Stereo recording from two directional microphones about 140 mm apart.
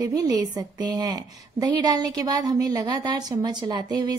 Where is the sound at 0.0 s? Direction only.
25° right (ahead or behind).